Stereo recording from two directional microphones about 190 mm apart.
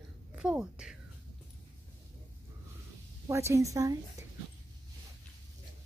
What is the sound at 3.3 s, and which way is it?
Speech, 15° right (ahead or behind).